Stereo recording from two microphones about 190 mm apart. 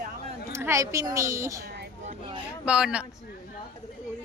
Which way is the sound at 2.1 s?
25° right (ahead or behind).